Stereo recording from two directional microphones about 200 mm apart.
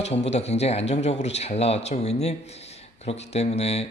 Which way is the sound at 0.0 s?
35° left (ahead or behind).